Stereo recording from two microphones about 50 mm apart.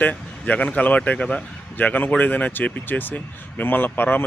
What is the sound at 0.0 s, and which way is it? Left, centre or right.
Speech, left.